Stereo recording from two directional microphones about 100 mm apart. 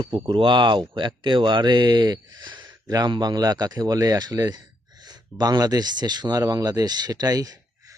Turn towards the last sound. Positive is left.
turn(degrees=-40)  # may be behind; listen again after turning